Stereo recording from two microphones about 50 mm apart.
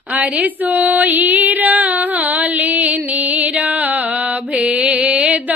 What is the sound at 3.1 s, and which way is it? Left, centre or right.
Music, right.